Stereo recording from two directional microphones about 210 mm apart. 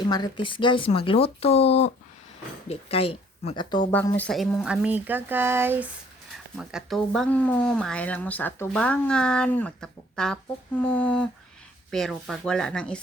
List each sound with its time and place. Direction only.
0.0 s speech: 20° left (ahead or behind)
3.9 s speech: 10° left (ahead or behind)